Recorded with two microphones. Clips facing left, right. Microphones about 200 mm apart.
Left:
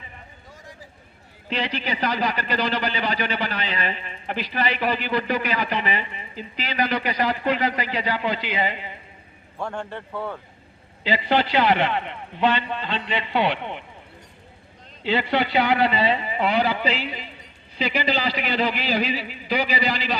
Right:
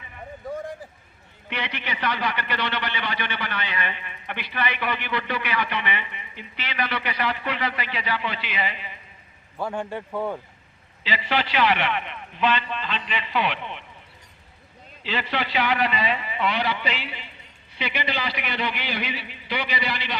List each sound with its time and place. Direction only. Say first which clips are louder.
0.4 s a sound: right 17 dB; 55° right (ahead or behind)
1.5 s speech: left 5 dB; 30° left (ahead or behind)
9.6 s a man's voice: right 2 dB; 5° right (ahead or behind)
11.3 s speech: left 3 dB; 35° left (ahead or behind)
15.0 s speech: left 6 dB; 30° left (ahead or behind)